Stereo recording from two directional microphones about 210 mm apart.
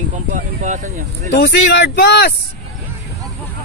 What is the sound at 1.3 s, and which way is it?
Speech, 55° left (ahead or behind).